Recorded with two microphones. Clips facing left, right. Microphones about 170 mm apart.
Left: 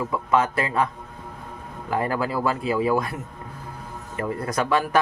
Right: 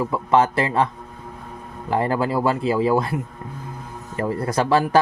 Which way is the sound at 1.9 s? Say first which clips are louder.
Right 4 dB; 25° right (ahead or behind).